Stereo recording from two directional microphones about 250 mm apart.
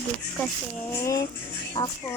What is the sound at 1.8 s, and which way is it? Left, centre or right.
Speech, centre.